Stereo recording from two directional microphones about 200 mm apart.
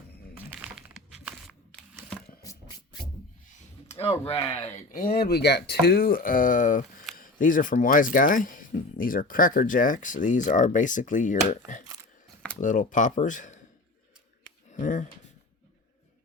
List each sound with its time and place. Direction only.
0.3 s crumpling: 5° right (ahead or behind)
3.8 s speech: 30° left (ahead or behind)
14.7 s a sound: 40° left (ahead or behind)